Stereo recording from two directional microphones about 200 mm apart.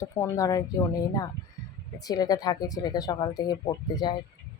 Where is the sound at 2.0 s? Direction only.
20° left (ahead or behind).